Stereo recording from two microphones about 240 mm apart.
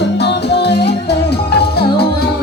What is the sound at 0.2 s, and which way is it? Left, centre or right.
Music, left.